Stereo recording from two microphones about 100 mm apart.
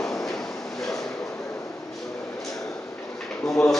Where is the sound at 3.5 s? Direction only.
5° left (ahead or behind).